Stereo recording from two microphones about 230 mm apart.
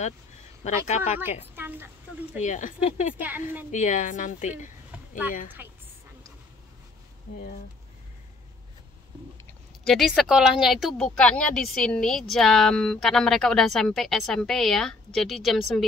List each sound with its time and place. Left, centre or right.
0.8 s speech: left
1.5 s speech: centre
2.4 s speech: left
3.2 s a woman's voice: centre
3.7 s speech: left
5.6 s a woman's voice: centre
9.5 s speech: centre